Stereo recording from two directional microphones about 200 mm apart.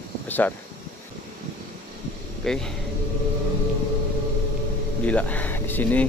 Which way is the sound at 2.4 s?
5° left (ahead or behind).